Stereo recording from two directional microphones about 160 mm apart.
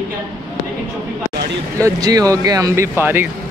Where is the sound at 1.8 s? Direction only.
20° right (ahead or behind).